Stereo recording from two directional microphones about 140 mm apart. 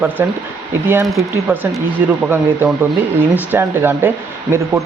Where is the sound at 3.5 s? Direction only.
15° right (ahead or behind).